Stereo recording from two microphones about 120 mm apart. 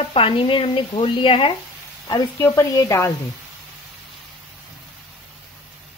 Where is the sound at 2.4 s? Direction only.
25° left (ahead or behind).